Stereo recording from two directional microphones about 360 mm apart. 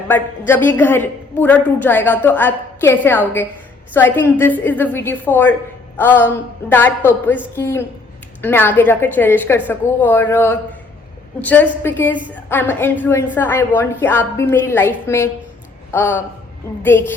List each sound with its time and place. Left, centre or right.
0.1 s a woman's voice: centre